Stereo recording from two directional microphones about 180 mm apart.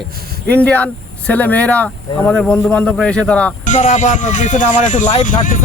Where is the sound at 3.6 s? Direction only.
40° left (ahead or behind).